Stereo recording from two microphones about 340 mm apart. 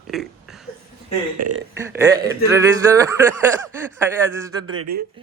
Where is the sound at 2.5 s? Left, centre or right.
Centre.